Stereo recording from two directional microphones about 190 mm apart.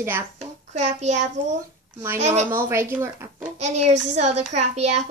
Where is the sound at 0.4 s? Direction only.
35° right (ahead or behind).